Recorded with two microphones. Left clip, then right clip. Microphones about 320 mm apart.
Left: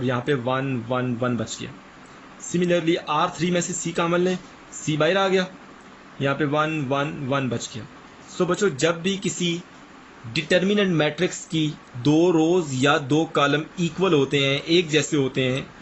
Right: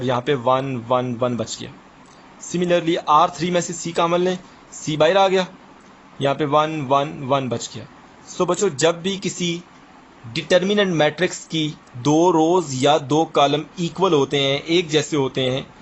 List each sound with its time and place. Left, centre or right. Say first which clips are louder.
0.0 s speech: right 4 dB; centre